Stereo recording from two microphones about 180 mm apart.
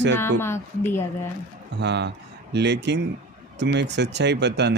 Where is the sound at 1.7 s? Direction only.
70° right (ahead or behind).